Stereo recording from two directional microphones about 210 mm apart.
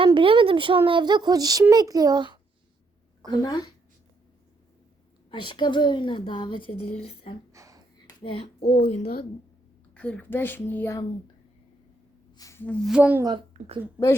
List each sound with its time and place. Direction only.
0.0 s a child's voice: 25° right (ahead or behind)
3.2 s a woman's voice: 20° left (ahead or behind)
5.3 s a woman's voice: 20° left (ahead or behind)
7.5 s a sound: 15° right (ahead or behind)
8.2 s a woman's voice: 25° left (ahead or behind)
8.8 s a woman's voice: 45° left (ahead or behind)
9.9 s a woman's voice: 5° left (ahead or behind)
12.3 s speech: 15° left (ahead or behind); by 13.2 s 5° right (ahead or behind)
13.5 s a woman's voice: 30° right (ahead or behind)